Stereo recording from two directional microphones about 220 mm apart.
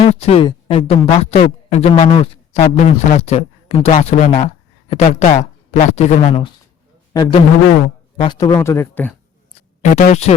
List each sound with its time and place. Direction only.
0.0 s a man's voice: 30° left (ahead or behind); by 9.1 s 10° left (ahead or behind)
9.9 s speech: 30° left (ahead or behind)